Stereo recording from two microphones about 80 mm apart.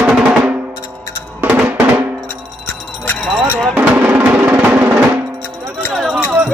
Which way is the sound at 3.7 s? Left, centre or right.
Right.